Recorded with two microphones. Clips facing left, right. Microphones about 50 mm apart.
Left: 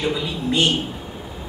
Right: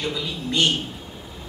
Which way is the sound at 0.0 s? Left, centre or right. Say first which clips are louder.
Left 4 dB; centre.